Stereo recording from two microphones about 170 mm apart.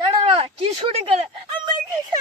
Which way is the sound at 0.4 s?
35° right (ahead or behind).